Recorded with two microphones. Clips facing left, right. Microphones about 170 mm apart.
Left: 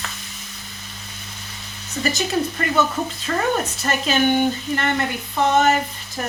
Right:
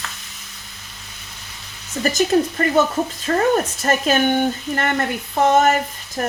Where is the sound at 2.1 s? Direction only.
45° right (ahead or behind).